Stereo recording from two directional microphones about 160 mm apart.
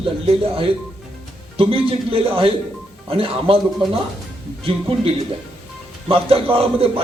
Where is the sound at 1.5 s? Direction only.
35° right (ahead or behind).